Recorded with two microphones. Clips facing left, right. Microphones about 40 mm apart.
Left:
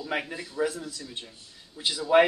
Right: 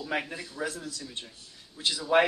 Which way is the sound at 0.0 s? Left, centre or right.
Centre.